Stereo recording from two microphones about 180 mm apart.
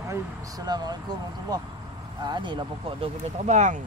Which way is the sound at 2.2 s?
25° right (ahead or behind).